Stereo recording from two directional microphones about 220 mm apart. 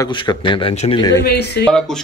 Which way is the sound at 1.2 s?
50° left (ahead or behind).